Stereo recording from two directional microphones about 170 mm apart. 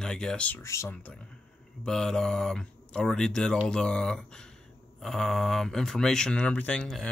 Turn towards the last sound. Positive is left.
turn(degrees=5)  # may be behind; listen again after turning